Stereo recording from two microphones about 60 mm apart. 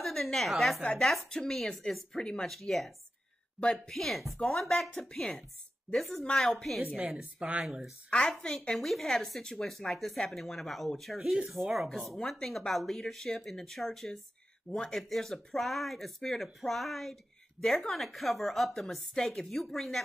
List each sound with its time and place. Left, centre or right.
0.0 s a woman's voice: centre
2.5 s a woman's voice: centre
3.5 s a woman's voice: centre
3.9 s a woman's voice: centre
7.2 s speech: centre
8.1 s a woman's voice: centre
8.7 s a woman's voice: centre